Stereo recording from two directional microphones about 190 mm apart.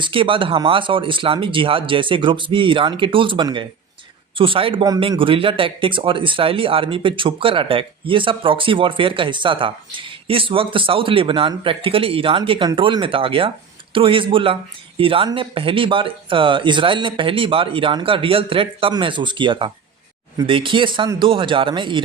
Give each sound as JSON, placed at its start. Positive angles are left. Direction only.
{"t": 0.0, "sound": "speech", "side_deg": -25}